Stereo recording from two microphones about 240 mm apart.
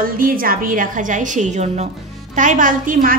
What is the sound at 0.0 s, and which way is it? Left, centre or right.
A woman's voice, right.